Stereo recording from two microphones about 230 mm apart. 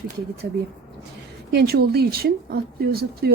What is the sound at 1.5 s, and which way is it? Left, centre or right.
Speech, right.